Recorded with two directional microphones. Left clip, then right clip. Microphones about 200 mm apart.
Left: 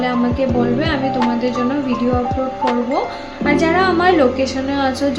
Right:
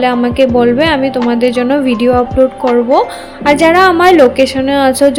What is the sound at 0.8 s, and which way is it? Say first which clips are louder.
Speech: right 7 dB; 45° right (ahead or behind).